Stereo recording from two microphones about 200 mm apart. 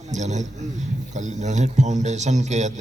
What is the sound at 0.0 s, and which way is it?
A man's voice, 35° right (ahead or behind).